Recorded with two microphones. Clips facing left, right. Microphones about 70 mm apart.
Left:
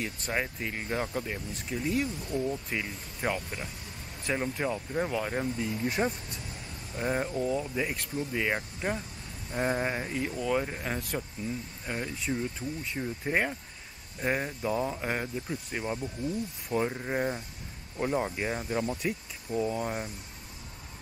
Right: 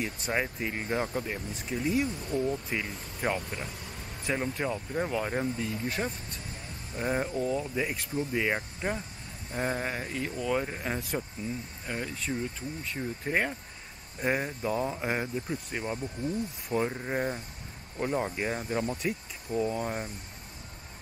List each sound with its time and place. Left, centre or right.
0.0 s speech: centre
1.7 s speech: centre
2.0 s speech: right
2.7 s speech: centre
6.0 s speech: centre
7.0 s speech: centre
9.5 s speech: centre